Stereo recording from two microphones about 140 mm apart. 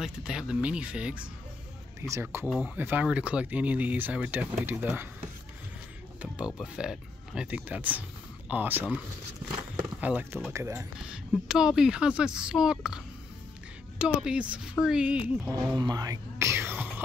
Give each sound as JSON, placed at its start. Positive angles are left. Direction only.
{"t": 0.0, "sound": "speech", "side_deg": -5}
{"t": 2.0, "sound": "speech", "side_deg": -20}
{"t": 6.2, "sound": "speech", "side_deg": -5}
{"t": 11.1, "sound": "speech", "side_deg": -5}
{"t": 15.6, "sound": "whispering", "side_deg": -30}